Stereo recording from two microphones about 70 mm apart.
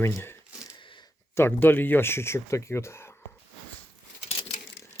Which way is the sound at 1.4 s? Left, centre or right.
Left.